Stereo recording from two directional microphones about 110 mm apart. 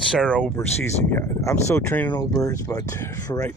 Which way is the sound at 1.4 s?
25° left (ahead or behind).